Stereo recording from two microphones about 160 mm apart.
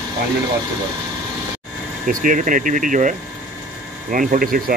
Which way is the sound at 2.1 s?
55° right (ahead or behind).